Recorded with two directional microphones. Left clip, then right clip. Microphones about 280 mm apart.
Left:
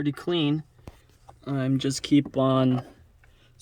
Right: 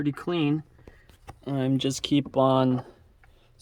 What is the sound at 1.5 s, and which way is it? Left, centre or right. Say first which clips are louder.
Speech: right 1 dB; right.